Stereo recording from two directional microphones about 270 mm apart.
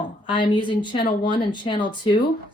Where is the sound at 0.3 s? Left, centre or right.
Centre.